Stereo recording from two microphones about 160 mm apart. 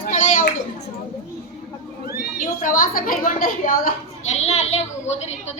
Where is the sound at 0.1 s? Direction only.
55° left (ahead or behind).